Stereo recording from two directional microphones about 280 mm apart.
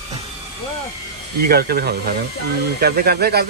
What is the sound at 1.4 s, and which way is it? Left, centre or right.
Speech, right.